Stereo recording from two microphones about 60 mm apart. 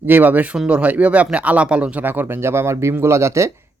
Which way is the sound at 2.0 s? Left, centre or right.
Right.